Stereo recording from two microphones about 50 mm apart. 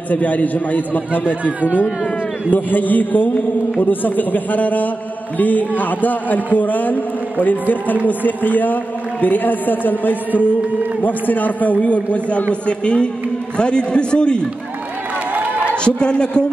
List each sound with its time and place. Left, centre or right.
0.1 s a man's voice: left
2.5 s a man's voice: left; by 14.5 s centre
15.7 s a man's voice: centre